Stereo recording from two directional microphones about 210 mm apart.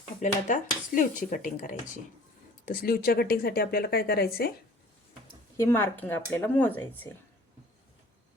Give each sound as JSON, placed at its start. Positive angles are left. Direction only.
{"t": 0.2, "sound": "speech", "side_deg": 35}
{"t": 5.5, "sound": "speech", "side_deg": 10}